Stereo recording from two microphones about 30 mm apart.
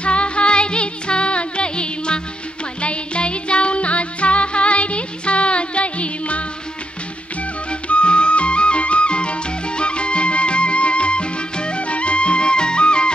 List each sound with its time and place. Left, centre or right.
0.0 s music: left
7.9 s music: left